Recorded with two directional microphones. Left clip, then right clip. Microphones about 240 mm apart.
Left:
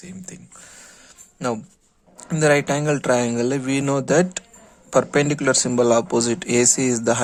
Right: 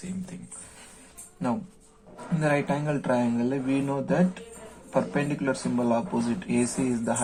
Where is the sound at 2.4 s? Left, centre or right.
Left.